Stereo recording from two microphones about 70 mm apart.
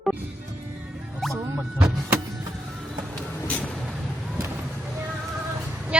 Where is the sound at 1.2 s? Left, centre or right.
Centre.